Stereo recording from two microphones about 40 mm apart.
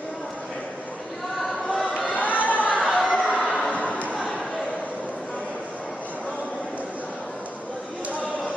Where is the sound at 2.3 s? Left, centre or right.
Left.